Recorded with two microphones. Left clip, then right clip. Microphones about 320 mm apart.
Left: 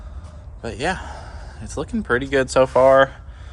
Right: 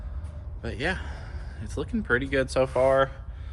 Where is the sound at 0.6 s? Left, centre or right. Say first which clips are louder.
Left 6 dB; centre.